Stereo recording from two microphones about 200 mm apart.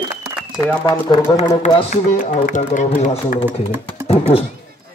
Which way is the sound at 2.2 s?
35° left (ahead or behind).